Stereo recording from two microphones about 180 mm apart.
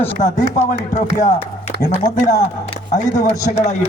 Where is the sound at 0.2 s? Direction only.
40° left (ahead or behind).